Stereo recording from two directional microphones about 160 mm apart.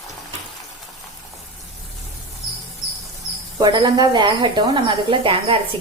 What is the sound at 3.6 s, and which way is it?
A woman's voice, 25° right (ahead or behind).